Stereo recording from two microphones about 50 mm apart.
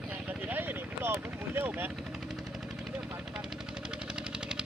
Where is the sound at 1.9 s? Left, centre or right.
Centre.